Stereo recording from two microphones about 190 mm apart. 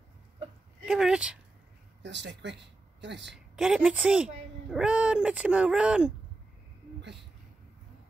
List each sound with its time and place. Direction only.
0.8 s speech: 5° right (ahead or behind)
2.0 s a woman's voice: 65° right (ahead or behind)
3.3 s speech: centre (ahead or behind)